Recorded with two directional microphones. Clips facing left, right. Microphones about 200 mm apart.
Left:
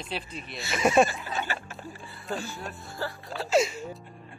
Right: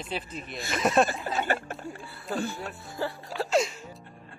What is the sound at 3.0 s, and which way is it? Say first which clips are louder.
Speech: right 3 dB; 15° right (ahead or behind).